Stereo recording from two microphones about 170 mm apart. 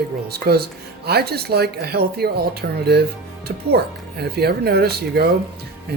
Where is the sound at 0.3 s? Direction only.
70° right (ahead or behind).